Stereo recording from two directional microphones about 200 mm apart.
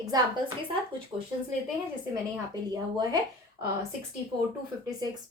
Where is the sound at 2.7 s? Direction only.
20° right (ahead or behind).